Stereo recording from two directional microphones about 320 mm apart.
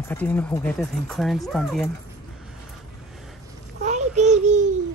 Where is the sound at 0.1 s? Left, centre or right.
Centre.